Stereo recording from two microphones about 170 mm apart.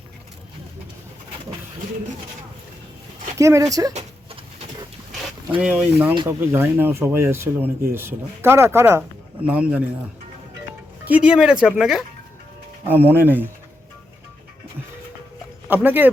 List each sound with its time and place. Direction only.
3.3 s speech: 20° right (ahead or behind)
5.5 s speech: 10° right (ahead or behind)
11.0 s speech: 5° right (ahead or behind)
15.7 s speech: 10° right (ahead or behind)